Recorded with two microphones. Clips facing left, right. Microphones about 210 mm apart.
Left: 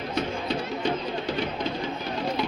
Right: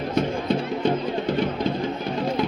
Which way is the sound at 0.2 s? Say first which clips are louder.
Right 6 dB; 55° right (ahead or behind).